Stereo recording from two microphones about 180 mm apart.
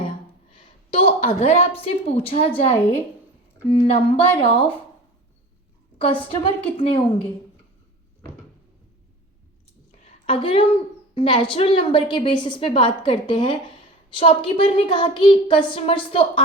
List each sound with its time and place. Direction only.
0.5 s a woman's voice: 30° left (ahead or behind)
6.0 s a woman's voice: 30° left (ahead or behind)
10.2 s a woman's voice: 30° left (ahead or behind)